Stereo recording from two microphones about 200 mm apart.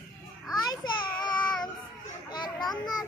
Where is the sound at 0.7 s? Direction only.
20° left (ahead or behind).